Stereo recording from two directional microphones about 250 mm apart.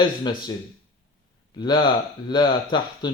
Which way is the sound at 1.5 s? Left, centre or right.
Centre.